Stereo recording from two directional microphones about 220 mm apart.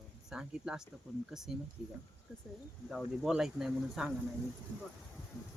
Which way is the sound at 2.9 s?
Centre (ahead or behind).